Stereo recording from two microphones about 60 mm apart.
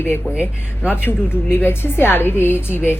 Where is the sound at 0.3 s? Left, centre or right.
Left.